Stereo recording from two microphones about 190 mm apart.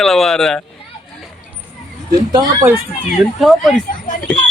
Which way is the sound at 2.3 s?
20° right (ahead or behind).